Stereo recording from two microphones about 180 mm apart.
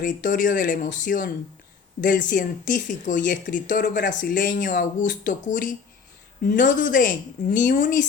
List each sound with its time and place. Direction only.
0.0 s speech: 50° left (ahead or behind)